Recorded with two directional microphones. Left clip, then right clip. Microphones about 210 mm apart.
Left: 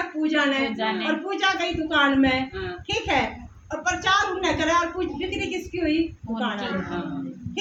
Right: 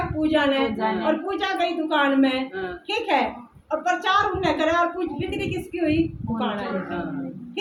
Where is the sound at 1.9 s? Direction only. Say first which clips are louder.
Left 2 dB; 15° left (ahead or behind).